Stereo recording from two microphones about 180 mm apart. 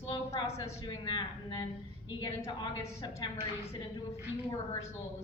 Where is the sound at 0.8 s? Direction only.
25° left (ahead or behind).